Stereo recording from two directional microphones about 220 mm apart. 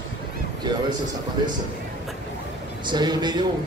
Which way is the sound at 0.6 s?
20° right (ahead or behind).